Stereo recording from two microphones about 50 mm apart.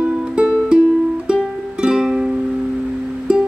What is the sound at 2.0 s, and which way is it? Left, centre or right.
Music, centre.